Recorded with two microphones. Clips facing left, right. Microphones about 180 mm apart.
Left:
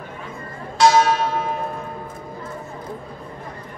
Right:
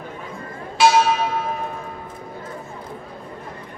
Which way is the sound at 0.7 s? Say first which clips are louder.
Left 1 dB; centre (ahead or behind).